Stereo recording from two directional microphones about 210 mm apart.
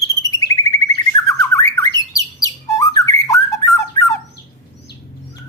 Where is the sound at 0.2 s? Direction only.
15° left (ahead or behind).